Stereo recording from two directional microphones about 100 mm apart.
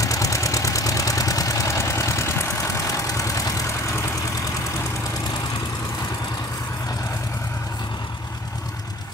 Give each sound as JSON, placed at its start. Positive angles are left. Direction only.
{"t": 0.0, "sound": "vehicle", "side_deg": 35}